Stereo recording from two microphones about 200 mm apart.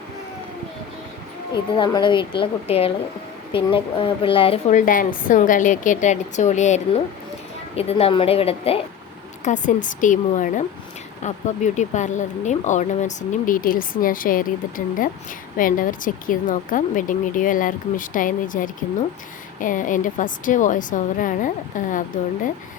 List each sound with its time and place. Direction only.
1.7 s speech: 25° left (ahead or behind); by 22.0 s 40° left (ahead or behind)